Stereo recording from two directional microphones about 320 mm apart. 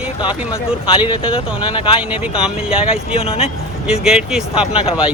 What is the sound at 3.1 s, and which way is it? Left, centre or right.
Speech, centre.